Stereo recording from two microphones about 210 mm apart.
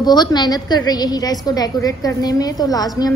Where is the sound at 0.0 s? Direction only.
20° left (ahead or behind).